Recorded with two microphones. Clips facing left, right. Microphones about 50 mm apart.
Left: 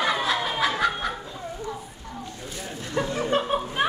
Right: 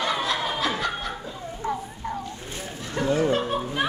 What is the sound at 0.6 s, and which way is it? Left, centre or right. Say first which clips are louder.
Snicker: left 3 dB; centre.